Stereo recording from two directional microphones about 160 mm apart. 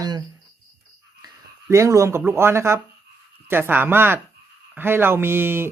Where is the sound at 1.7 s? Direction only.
20° right (ahead or behind).